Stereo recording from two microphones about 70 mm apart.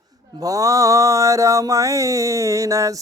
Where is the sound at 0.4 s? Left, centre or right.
Right.